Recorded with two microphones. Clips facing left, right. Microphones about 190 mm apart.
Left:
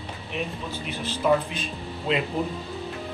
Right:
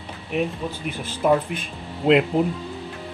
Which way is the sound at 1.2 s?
55° right (ahead or behind).